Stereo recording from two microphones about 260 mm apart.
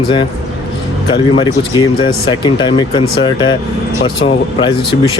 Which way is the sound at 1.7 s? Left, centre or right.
Centre.